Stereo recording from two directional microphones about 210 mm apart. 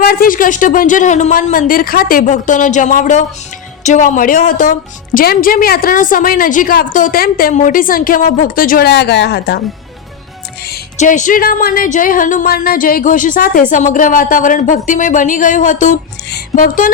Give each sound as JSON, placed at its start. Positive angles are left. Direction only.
{"t": 0.0, "sound": "a woman's voice", "side_deg": 45}
{"t": 10.9, "sound": "a woman's voice", "side_deg": 35}